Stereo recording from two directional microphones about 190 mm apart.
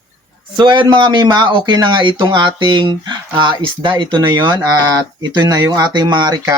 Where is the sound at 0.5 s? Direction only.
25° right (ahead or behind).